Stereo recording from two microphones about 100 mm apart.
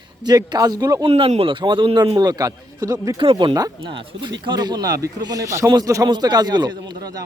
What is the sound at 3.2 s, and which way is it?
Speech, 60° right (ahead or behind).